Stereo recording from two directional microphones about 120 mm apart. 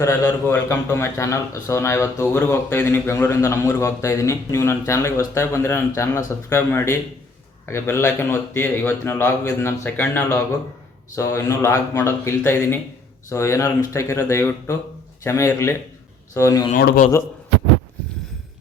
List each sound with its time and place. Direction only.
0.0 s a man's voice: 20° left (ahead or behind)